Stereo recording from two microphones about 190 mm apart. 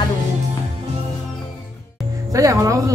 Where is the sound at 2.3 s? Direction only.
15° right (ahead or behind).